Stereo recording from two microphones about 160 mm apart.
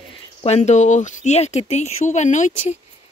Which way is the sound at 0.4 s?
45° left (ahead or behind).